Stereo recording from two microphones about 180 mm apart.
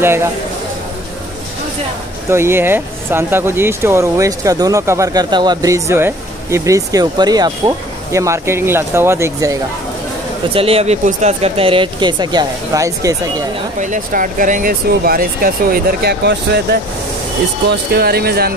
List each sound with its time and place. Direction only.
0.0 s speech: 15° right (ahead or behind)
2.2 s speech: 15° right (ahead or behind)
10.5 s speech: 30° right (ahead or behind)
13.7 s speech: 45° right (ahead or behind); by 16.6 s 65° right (ahead or behind)
17.9 s speech: 60° right (ahead or behind)